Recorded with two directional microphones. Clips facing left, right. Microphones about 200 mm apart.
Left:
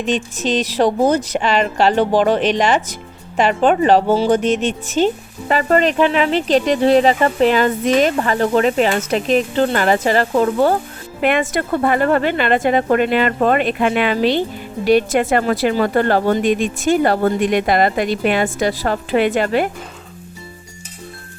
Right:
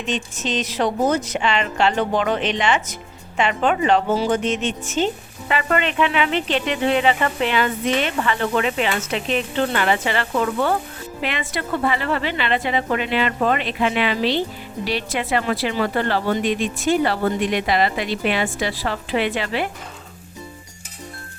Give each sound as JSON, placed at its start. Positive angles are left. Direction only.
{"t": 0.1, "sound": "speech", "side_deg": 35}
{"t": 11.2, "sound": "speech", "side_deg": 50}